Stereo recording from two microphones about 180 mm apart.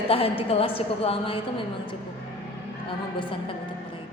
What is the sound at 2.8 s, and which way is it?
Speech, 30° left (ahead or behind).